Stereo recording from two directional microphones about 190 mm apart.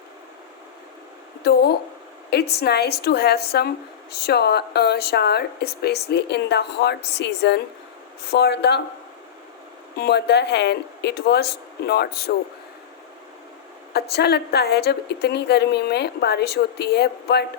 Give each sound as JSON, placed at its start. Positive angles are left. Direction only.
{"t": 1.5, "sound": "speech", "side_deg": 60}
{"t": 10.0, "sound": "speech", "side_deg": 60}
{"t": 13.9, "sound": "speech", "side_deg": 60}